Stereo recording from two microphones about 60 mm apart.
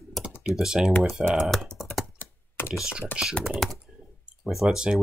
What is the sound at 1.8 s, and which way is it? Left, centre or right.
Computer keyboard, centre.